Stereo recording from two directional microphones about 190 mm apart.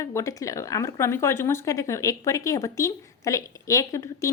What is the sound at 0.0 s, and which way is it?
A woman's voice, 15° left (ahead or behind).